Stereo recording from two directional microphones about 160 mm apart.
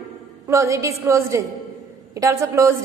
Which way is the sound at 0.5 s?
20° right (ahead or behind).